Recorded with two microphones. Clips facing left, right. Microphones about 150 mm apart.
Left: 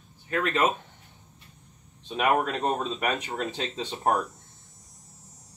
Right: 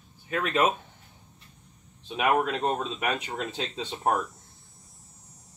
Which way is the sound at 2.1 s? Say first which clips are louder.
Even; 5° right (ahead or behind).